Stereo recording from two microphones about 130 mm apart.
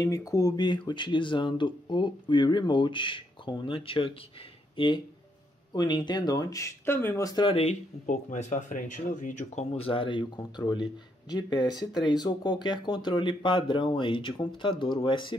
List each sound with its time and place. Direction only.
0.0 s speech: 25° left (ahead or behind)
7.4 s speech: 50° left (ahead or behind)
8.1 s speech: 70° left (ahead or behind)
9.8 s speech: 45° left (ahead or behind)